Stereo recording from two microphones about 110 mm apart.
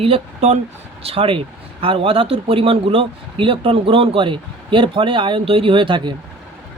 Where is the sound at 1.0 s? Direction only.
55° right (ahead or behind).